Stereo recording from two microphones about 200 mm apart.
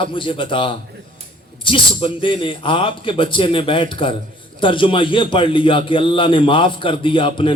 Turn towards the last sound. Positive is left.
turn(degrees=25)  # may be behind; listen again after turning